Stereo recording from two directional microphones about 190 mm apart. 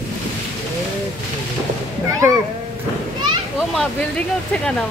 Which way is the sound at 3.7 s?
5° left (ahead or behind).